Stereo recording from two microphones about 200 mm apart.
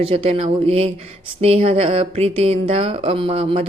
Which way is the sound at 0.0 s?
30° right (ahead or behind).